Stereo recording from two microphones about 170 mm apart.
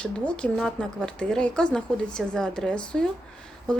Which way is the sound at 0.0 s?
5° left (ahead or behind).